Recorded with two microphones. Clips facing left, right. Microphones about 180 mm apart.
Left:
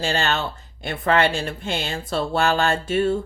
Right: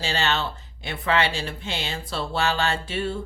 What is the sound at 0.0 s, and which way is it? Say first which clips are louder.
Speech: left 3 dB; 50° left (ahead or behind).